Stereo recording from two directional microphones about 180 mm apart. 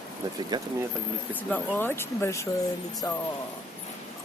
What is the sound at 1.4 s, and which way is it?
Speech, 10° left (ahead or behind).